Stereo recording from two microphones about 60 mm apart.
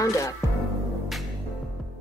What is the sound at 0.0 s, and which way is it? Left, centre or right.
Speech, left.